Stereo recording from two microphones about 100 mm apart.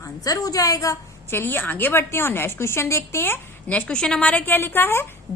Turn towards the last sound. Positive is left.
turn(degrees=25)  # may be behind; listen again after turning